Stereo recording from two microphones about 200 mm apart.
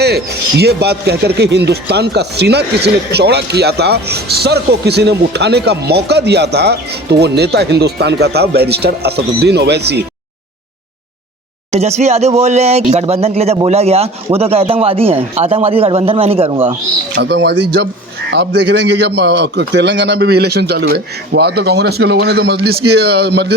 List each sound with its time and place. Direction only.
0.0 s speech: 55° right (ahead or behind)
11.7 s speech: 35° right (ahead or behind)
17.2 s speech: 60° right (ahead or behind)